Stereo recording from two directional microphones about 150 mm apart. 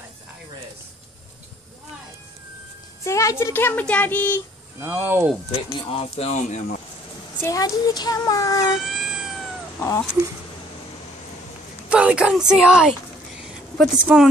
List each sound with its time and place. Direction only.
3.0 s a woman's voice: 20° left (ahead or behind)
4.7 s speech: 15° right (ahead or behind)
5.7 s speech: 40° left (ahead or behind); by 6.8 s 55° left (ahead or behind)
7.4 s speech: 25° left (ahead or behind)
8.7 s cat: 5° right (ahead or behind)
9.8 s speech: 15° left (ahead or behind)
11.9 s speech: 10° right (ahead or behind)
13.4 s a sound: 5° right (ahead or behind)